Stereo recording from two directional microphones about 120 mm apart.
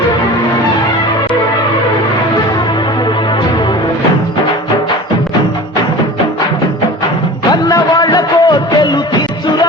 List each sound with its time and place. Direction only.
7.5 s music: 35° left (ahead or behind)